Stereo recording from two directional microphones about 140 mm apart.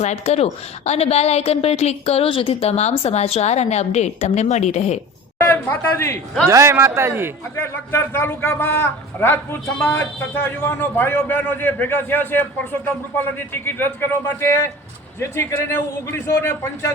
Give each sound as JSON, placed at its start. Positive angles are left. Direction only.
{"t": 0.0, "sound": "a woman's voice", "side_deg": 55}
{"t": 5.5, "sound": "a man's voice", "side_deg": 15}
{"t": 6.5, "sound": "a man's voice", "side_deg": -20}
{"t": 7.5, "sound": "a man's voice", "side_deg": 15}
{"t": 13.5, "sound": "a man's voice", "side_deg": 15}